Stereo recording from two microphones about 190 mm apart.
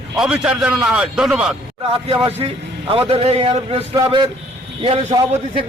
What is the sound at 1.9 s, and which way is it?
A man's voice, 25° right (ahead or behind).